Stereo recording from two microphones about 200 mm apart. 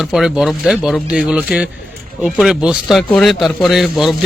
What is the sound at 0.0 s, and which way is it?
Speech, 5° right (ahead or behind).